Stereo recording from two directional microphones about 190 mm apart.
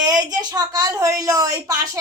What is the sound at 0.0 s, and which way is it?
A woman's voice, 20° right (ahead or behind).